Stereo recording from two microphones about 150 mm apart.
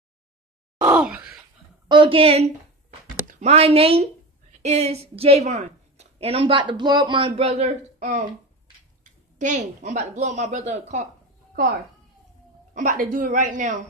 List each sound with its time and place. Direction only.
0.7 s groan: 10° right (ahead or behind)
1.9 s a woman's voice: 35° right (ahead or behind); by 11.1 s 50° right (ahead or behind)
12.7 s a woman's voice: 60° right (ahead or behind)